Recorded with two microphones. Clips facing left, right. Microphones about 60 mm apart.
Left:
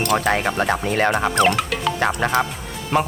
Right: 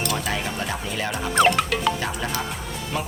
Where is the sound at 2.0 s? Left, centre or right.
Left.